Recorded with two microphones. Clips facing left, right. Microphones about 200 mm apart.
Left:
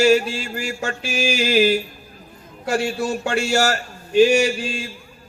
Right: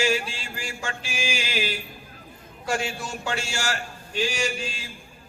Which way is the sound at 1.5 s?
40° left (ahead or behind).